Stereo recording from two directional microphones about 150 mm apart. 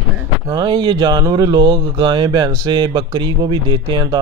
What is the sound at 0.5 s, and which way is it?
Speech, 30° right (ahead or behind).